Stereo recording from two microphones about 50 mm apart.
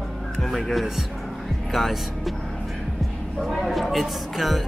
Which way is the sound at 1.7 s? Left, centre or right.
Centre.